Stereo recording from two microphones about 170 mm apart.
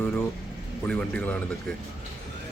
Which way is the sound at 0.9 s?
5° left (ahead or behind).